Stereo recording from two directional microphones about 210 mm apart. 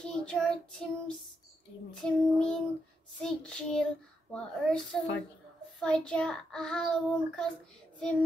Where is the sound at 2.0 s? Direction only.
5° left (ahead or behind).